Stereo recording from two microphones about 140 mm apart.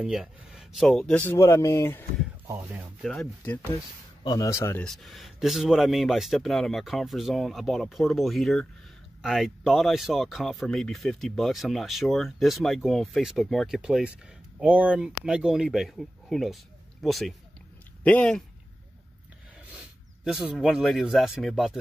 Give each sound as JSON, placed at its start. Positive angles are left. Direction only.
{"t": 0.0, "sound": "speech", "side_deg": -5}
{"t": 1.2, "sound": "speech", "side_deg": 20}
{"t": 2.4, "sound": "speech", "side_deg": -20}
{"t": 3.0, "sound": "speech", "side_deg": 5}
{"t": 3.4, "sound": "speech", "side_deg": 15}
{"t": 4.8, "sound": "speech", "side_deg": 0}
{"t": 19.7, "sound": "speech", "side_deg": -5}